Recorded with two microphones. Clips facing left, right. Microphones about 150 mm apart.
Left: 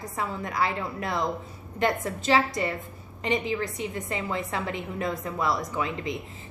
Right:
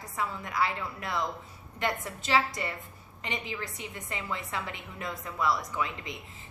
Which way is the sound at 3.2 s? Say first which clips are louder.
Left 9 dB; 30° left (ahead or behind).